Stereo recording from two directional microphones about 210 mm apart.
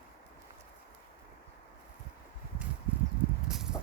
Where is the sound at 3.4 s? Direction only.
5° right (ahead or behind).